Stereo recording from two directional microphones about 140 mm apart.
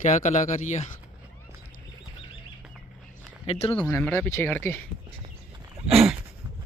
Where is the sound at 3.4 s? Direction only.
45° left (ahead or behind).